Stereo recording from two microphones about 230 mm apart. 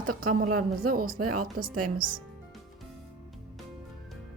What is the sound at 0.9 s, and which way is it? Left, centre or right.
Speech, right.